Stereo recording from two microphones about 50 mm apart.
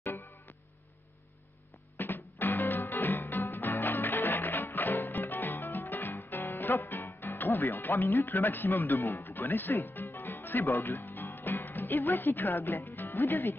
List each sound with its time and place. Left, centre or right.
2.0 s music: left
12.0 s speech: left